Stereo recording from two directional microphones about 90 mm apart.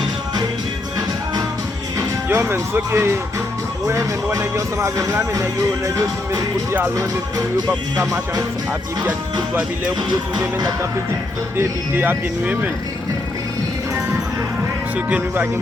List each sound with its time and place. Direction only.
2.3 s speech: 25° right (ahead or behind)
6.9 s speech: 40° right (ahead or behind)
11.5 s speech: 20° right (ahead or behind)
14.9 s speech: 15° right (ahead or behind)